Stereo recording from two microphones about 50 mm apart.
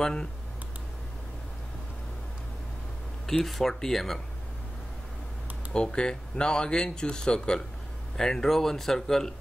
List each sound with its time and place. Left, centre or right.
0.0 s speech: centre
3.3 s speech: centre
5.7 s speech: centre